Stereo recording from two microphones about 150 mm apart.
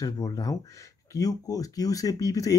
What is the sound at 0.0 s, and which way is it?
Speech, 25° left (ahead or behind).